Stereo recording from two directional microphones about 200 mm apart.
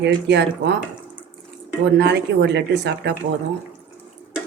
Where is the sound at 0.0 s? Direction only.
60° right (ahead or behind).